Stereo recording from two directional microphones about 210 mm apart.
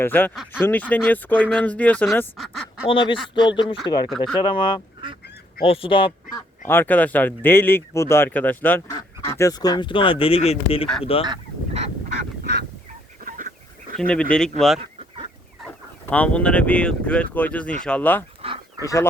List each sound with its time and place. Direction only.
0.0 s speech: 10° left (ahead or behind)
2.8 s speech: 25° left (ahead or behind)
6.7 s speech: 10° left (ahead or behind); by 11.3 s 25° left (ahead or behind)
11.3 s goose: 30° right (ahead or behind)
12.0 s goose: 45° right (ahead or behind)
13.2 s a sound: 40° right (ahead or behind)
14.1 s speech: 5° left (ahead or behind)
14.8 s chicken: 25° right (ahead or behind)
16.0 s speech: 5° left (ahead or behind)